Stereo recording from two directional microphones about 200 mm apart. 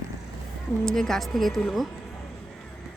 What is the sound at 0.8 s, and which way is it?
Speech, centre (ahead or behind).